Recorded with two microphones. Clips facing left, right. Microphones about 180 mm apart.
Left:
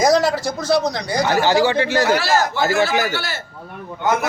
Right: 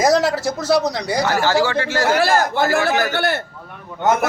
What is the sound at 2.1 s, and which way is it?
A man's voice, 55° right (ahead or behind).